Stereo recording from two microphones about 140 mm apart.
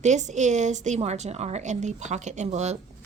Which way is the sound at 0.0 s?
55° right (ahead or behind).